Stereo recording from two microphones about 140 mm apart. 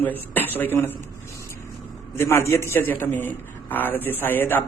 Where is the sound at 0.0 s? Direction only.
15° left (ahead or behind).